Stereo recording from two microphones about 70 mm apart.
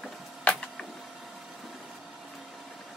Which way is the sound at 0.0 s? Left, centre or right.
Centre.